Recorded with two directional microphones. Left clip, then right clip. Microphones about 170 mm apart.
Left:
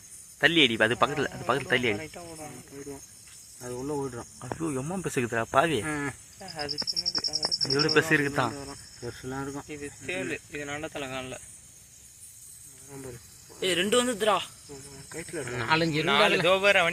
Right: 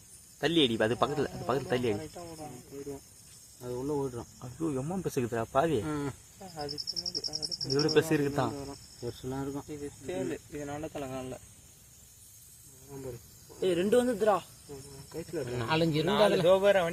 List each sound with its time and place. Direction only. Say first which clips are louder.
0.3 s speech: left 5 dB; 10° left (ahead or behind)
2.0 s speech: left 2 dB; 15° right (ahead or behind)
3.6 s speech: left 1 dB; 5° left (ahead or behind)
6.4 s a man's voice: left 5 dB; 15° right (ahead or behind)
7.8 s speech: left 3 dB; 5° left (ahead or behind)
9.6 s speech: left 3 dB; 30° right (ahead or behind)
13.6 s speech: left 2 dB; 45° right (ahead or behind)
15.1 s speech: left 1 dB; 10° right (ahead or behind)
16.5 s a man's voice: left 2 dB; 25° right (ahead or behind)